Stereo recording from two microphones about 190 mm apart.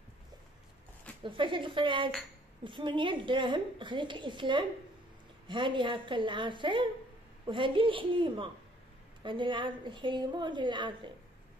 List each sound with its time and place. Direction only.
1.2 s a woman's voice: 25° right (ahead or behind)